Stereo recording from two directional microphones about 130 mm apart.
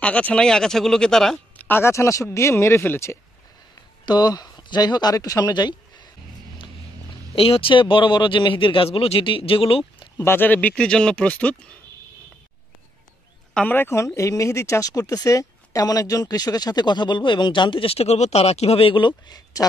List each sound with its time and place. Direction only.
0.0 s speech: 10° left (ahead or behind)
1.6 s speech: 15° left (ahead or behind)
4.0 s speech: 30° left (ahead or behind)
7.3 s speech: 45° left (ahead or behind)
10.1 s speech: 20° left (ahead or behind)
13.7 s speech: 20° left (ahead or behind)